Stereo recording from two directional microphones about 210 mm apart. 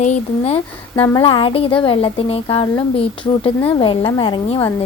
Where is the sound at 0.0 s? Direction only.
30° left (ahead or behind).